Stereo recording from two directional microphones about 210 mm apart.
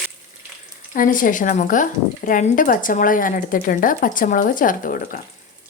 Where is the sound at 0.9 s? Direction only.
40° left (ahead or behind).